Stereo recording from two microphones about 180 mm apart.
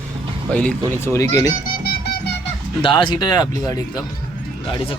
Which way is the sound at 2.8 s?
25° left (ahead or behind).